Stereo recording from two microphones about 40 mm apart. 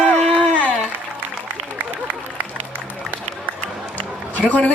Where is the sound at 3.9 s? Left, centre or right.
Left.